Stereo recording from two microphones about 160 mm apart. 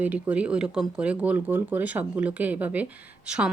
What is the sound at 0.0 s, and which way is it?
Speech, 10° right (ahead or behind).